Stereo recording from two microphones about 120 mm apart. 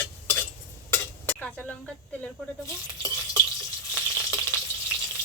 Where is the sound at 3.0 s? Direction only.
25° left (ahead or behind).